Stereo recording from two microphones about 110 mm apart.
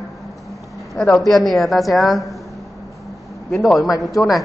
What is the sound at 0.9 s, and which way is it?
A man's voice, 5° left (ahead or behind).